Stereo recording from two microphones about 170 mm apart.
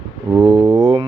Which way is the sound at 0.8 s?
35° right (ahead or behind).